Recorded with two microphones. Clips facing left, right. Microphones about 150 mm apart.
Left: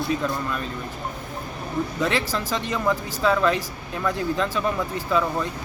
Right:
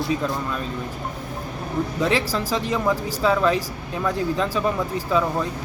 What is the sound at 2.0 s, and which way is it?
Speech, 35° right (ahead or behind).